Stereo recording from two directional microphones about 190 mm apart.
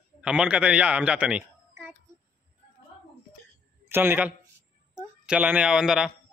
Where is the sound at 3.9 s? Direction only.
10° right (ahead or behind).